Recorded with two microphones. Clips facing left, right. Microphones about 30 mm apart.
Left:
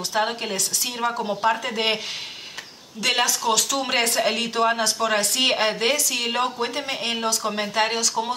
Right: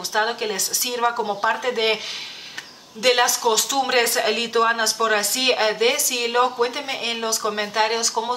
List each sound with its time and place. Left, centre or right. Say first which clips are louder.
0.1 s speech: right 3 dB; centre
3.0 s speech: right 4 dB; centre